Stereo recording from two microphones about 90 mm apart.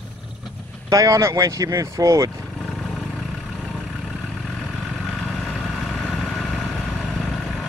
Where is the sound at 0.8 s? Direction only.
40° right (ahead or behind).